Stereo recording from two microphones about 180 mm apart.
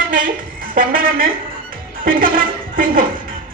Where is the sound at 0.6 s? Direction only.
50° right (ahead or behind).